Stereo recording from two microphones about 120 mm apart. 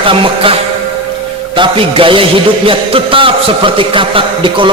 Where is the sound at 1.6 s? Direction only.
50° right (ahead or behind).